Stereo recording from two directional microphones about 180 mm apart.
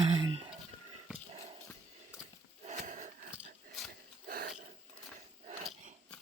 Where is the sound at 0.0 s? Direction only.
25° right (ahead or behind).